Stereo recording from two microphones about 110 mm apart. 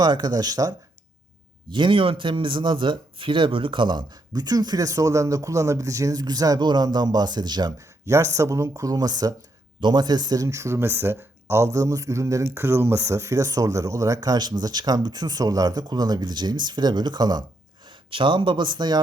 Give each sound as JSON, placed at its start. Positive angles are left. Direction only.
{"t": 0.0, "sound": "speech", "side_deg": -35}
{"t": 1.7, "sound": "speech", "side_deg": -50}
{"t": 8.0, "sound": "speech", "side_deg": -30}